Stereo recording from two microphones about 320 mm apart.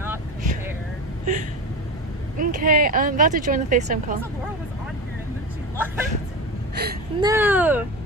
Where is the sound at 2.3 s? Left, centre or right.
Right.